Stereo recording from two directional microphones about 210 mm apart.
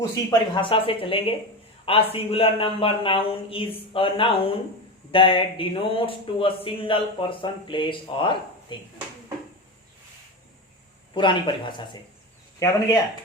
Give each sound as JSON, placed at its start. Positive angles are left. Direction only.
{"t": 0.0, "sound": "speech", "side_deg": 20}
{"t": 11.1, "sound": "speech", "side_deg": 25}